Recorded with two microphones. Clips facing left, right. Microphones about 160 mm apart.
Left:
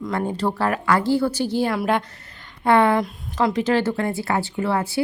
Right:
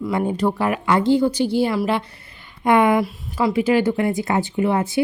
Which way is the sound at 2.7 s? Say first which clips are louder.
Right 1 dB; 15° right (ahead or behind).